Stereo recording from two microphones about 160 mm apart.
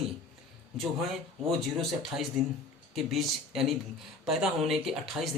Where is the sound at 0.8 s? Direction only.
Centre (ahead or behind).